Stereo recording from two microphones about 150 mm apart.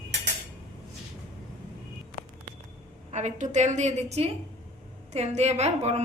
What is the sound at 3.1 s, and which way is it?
A woman's voice, 50° right (ahead or behind).